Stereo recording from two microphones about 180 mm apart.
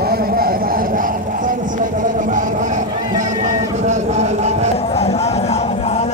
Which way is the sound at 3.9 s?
40° right (ahead or behind).